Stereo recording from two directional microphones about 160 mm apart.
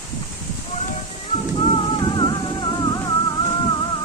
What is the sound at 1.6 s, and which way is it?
Music, 30° left (ahead or behind).